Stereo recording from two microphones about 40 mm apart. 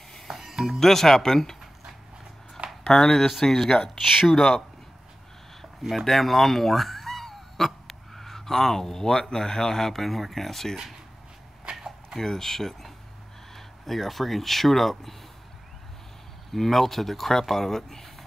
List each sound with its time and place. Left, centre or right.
0.3 s speech: centre
0.7 s speech: centre
2.8 s speech: centre
4.0 s speech: centre
4.4 s speech: centre
5.6 s speech: centre
12.2 s speech: centre
16.5 s speech: centre